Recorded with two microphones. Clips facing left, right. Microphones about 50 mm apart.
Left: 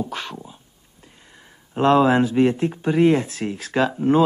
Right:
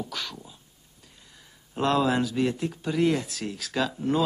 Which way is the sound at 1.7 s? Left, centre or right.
Left.